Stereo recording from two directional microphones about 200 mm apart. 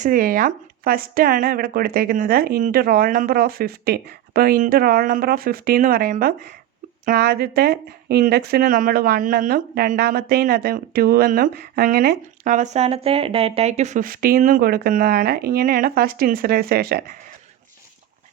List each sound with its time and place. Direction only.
0.0 s speech: 45° right (ahead or behind)